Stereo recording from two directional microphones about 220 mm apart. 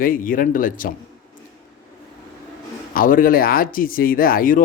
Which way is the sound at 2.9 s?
40° left (ahead or behind).